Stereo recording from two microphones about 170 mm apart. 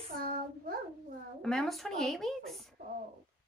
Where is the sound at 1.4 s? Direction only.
5° left (ahead or behind).